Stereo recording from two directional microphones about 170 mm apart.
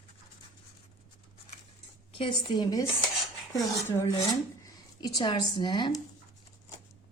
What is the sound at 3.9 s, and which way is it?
A woman's voice, 20° left (ahead or behind).